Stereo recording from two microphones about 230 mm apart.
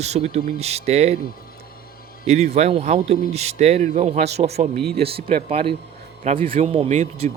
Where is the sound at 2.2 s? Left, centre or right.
Right.